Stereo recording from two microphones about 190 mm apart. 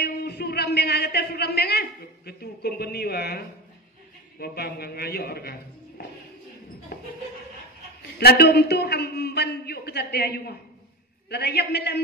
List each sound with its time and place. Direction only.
0.0 s a man's voice: 55° left (ahead or behind)
6.9 s a sound: 55° left (ahead or behind)
8.2 s a man's voice: 55° left (ahead or behind)